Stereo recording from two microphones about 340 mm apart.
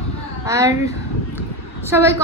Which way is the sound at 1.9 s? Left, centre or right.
Centre.